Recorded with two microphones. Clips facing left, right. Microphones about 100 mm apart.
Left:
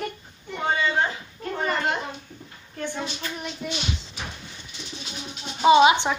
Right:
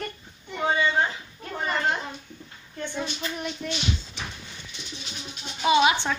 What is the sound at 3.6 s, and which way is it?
Speech, 10° left (ahead or behind).